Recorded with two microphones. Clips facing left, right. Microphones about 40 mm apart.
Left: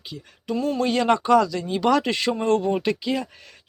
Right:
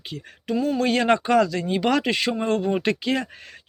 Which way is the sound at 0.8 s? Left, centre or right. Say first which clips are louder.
Even; right.